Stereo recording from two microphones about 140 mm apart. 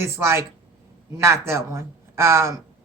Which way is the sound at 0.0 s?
20° right (ahead or behind).